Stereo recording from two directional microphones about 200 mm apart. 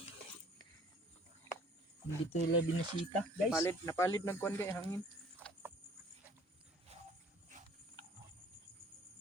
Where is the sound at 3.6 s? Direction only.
15° left (ahead or behind).